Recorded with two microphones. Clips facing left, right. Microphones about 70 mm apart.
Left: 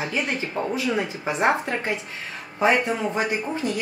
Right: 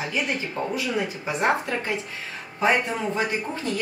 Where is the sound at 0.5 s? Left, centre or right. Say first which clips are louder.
Left 4 dB; left.